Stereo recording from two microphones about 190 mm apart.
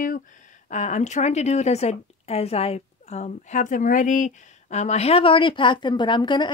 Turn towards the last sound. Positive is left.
turn(degrees=25)  # may be behind; listen again after turning